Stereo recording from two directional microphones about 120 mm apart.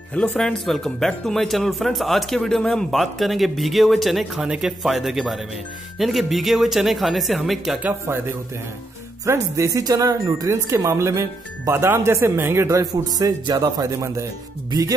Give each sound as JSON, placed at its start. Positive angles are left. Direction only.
{"t": 0.1, "sound": "speech", "side_deg": 10}
{"t": 9.2, "sound": "speech", "side_deg": -25}
{"t": 12.9, "sound": "speech", "side_deg": -35}